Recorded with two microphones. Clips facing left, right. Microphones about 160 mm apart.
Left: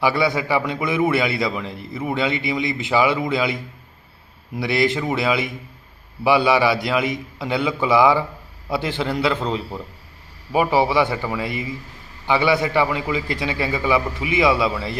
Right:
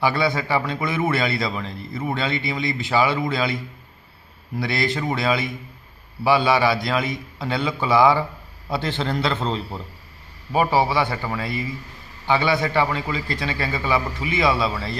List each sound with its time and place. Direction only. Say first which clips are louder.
0.0 s a man's voice: left 2 dB; 15° left (ahead or behind)
10.7 s a man's voice: left 2 dB; 15° left (ahead or behind)